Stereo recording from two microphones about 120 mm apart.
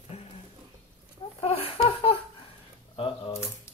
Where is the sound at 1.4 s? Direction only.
55° left (ahead or behind).